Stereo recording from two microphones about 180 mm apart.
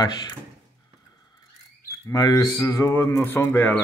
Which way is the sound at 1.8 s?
20° left (ahead or behind).